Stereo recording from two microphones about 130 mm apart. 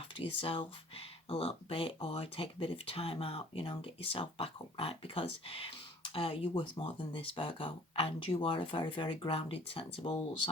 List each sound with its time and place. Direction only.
0.2 s speech: 45° left (ahead or behind)